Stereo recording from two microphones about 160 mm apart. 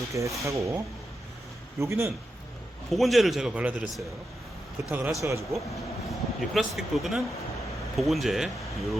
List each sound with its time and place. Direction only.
0.1 s speech: 20° right (ahead or behind)
1.8 s a man's voice: 15° right (ahead or behind)
2.9 s a man's voice: centre (ahead or behind); by 5.5 s 20° right (ahead or behind)
6.1 s a man's voice: centre (ahead or behind)